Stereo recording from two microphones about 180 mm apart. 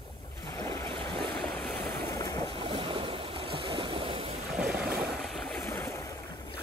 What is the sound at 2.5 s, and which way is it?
Stream, 30° right (ahead or behind).